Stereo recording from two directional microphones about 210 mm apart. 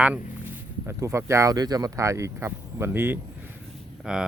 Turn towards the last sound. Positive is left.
turn(degrees=-5)  # may be behind; listen again after turning